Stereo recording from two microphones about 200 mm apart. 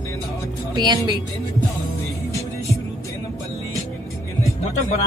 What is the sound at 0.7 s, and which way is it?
Speech, 20° right (ahead or behind).